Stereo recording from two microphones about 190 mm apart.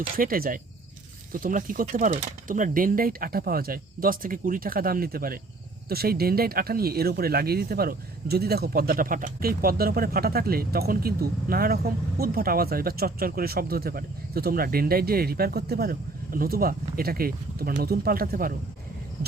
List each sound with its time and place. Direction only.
0.0 s speech: 50° right (ahead or behind)